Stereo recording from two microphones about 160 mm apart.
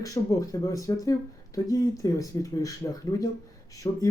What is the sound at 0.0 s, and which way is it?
Speech, 20° left (ahead or behind).